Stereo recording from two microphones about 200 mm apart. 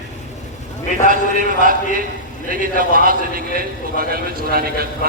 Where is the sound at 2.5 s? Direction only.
45° right (ahead or behind).